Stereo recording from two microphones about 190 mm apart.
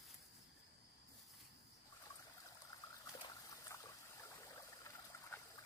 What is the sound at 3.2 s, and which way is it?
Trickle, 15° left (ahead or behind).